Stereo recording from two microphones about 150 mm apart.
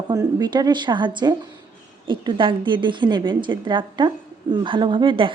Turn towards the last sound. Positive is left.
turn(degrees=-35)  # may be behind; listen again after turning